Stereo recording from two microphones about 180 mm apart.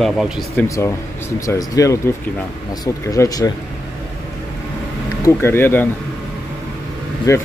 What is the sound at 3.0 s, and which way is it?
Speech, 20° left (ahead or behind).